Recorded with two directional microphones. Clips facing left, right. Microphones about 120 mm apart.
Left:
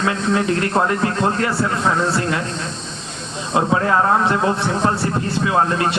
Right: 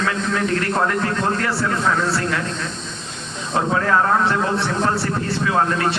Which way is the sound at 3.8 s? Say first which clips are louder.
Right 1 dB; 20° left (ahead or behind).